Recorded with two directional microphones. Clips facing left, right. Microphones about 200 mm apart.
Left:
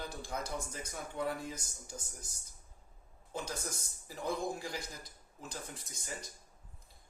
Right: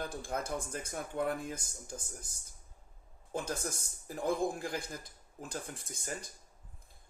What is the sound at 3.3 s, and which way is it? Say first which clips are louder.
Speech: right 4 dB; 50° right (ahead or behind).